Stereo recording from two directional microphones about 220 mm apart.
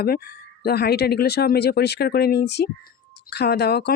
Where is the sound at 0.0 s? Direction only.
45° left (ahead or behind).